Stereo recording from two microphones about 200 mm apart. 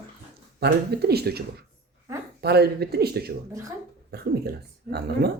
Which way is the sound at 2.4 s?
55° right (ahead or behind).